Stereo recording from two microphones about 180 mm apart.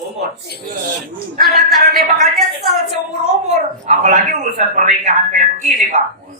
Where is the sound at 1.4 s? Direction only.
55° right (ahead or behind).